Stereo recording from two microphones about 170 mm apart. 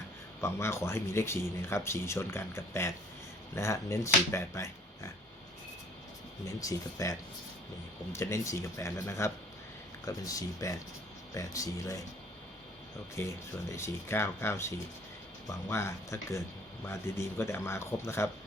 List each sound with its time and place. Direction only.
0.4 s speech: 15° left (ahead or behind)
6.6 s speech: 20° left (ahead or behind)
13.1 s speech: 15° left (ahead or behind)